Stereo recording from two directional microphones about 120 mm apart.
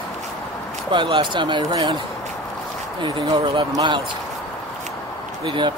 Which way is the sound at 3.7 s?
35° right (ahead or behind).